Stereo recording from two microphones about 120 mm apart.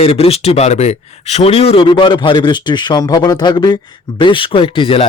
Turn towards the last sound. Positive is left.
turn(degrees=50)  # may be behind; listen again after turning